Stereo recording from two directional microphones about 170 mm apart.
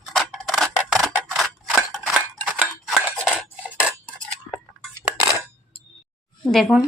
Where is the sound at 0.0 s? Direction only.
Centre (ahead or behind).